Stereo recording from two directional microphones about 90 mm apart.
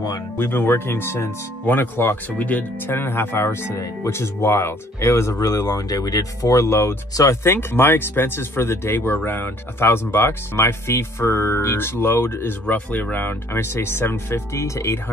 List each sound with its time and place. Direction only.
0.4 s speech: 25° left (ahead or behind)